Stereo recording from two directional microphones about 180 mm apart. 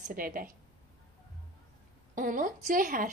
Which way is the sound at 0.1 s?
50° right (ahead or behind).